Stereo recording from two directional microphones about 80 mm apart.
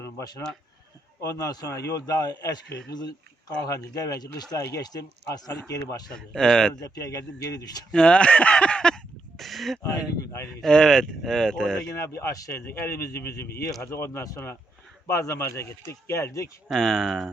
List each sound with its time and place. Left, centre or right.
0.0 s a sound: left
1.2 s a man's voice: left
3.7 s a man's voice: left
4.5 s a man's voice: left
4.9 s a man's voice: left
5.6 s a man's voice: left
6.1 s speech: centre
6.8 s a man's voice: left
7.9 s speech: centre
9.4 s speech: centre
10.2 s a man's voice: left
10.6 s speech: centre
11.9 s a man's voice: left
16.6 s speech: centre